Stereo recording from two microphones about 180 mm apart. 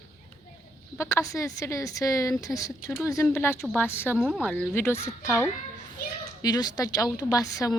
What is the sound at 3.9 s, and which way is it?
A woman's voice, 10° left (ahead or behind).